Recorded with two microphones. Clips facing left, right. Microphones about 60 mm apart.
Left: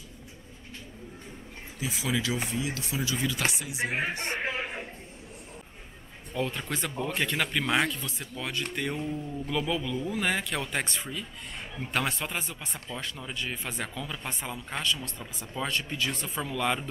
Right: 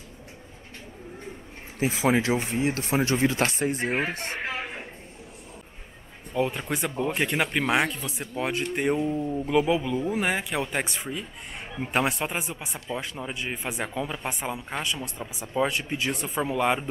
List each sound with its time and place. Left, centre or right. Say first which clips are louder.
1.8 s speech: right 8 dB; right
6.3 s speech: right 5 dB; centre